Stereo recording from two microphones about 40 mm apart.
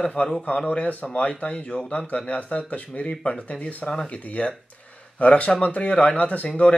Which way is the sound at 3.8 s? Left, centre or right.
Centre.